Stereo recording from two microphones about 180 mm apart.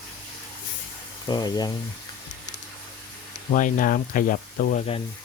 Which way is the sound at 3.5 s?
50° left (ahead or behind).